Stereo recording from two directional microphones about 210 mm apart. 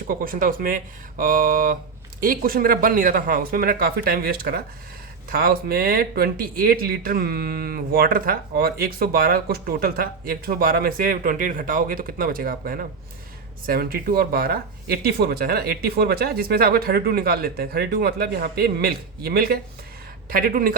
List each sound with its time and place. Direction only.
0.1 s speech: 40° right (ahead or behind)